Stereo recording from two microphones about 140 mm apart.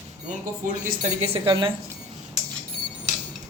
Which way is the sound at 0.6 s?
75° right (ahead or behind).